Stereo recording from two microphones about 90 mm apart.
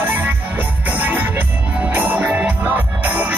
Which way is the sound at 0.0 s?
20° right (ahead or behind).